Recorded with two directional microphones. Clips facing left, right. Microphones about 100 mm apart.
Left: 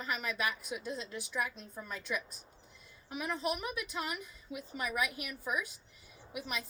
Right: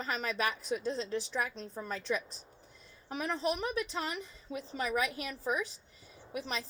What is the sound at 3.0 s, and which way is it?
Speech, 35° right (ahead or behind).